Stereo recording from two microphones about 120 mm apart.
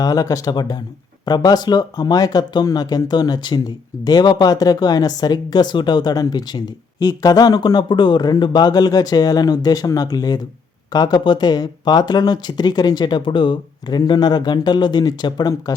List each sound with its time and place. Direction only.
0.0 s speech: 30° left (ahead or behind)